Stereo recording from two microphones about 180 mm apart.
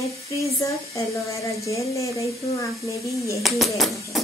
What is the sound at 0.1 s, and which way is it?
Speech, 15° left (ahead or behind).